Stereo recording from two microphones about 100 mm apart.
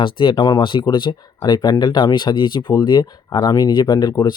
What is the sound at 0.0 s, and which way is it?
Speech, 55° left (ahead or behind).